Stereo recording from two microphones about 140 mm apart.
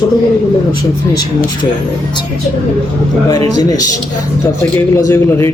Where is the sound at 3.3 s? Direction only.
30° left (ahead or behind).